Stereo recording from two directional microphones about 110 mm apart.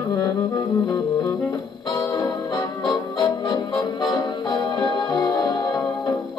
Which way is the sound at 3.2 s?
35° left (ahead or behind).